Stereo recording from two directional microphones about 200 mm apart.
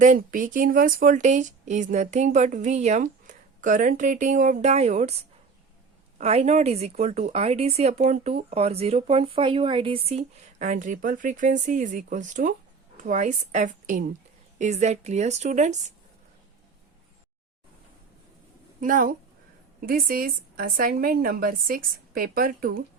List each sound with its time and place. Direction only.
0.0 s speech: 40° right (ahead or behind)
6.1 s speech: 35° right (ahead or behind)
18.8 s a woman's voice: 40° right (ahead or behind)